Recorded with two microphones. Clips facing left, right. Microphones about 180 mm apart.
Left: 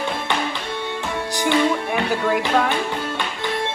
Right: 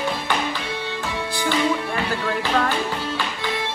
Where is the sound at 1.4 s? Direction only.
15° left (ahead or behind).